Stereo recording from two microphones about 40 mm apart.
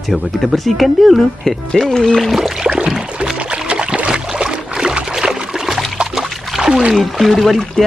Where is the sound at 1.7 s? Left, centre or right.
Centre.